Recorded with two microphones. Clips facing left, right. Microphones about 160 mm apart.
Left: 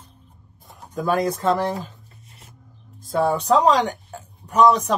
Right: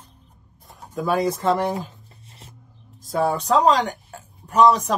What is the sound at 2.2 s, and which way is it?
Music, 30° right (ahead or behind).